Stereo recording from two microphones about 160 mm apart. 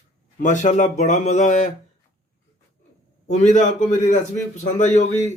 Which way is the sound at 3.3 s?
50° left (ahead or behind).